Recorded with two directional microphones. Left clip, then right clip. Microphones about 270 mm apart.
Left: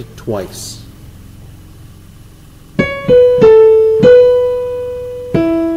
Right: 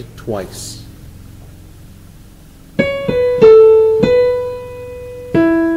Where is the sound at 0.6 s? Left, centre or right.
Centre.